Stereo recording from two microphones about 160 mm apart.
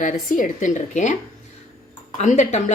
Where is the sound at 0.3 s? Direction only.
55° left (ahead or behind).